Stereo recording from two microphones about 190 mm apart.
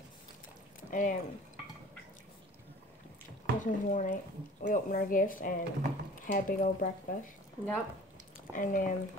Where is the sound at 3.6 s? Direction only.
40° left (ahead or behind).